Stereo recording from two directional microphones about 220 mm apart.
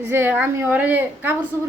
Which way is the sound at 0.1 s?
10° right (ahead or behind).